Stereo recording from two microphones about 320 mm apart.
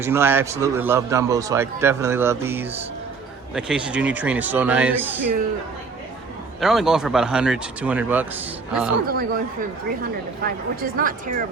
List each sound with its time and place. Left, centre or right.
0.0 s a man's voice: centre
6.6 s speech: centre
9.0 s a woman's voice: right